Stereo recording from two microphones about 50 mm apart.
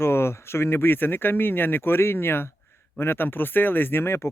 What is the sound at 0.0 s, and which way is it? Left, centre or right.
Speech, left.